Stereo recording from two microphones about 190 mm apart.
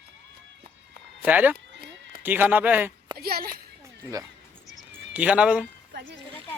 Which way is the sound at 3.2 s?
55° right (ahead or behind).